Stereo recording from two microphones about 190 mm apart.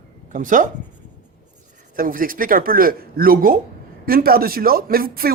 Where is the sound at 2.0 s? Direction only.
50° right (ahead or behind).